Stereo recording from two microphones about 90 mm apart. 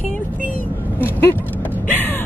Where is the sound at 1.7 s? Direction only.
20° left (ahead or behind).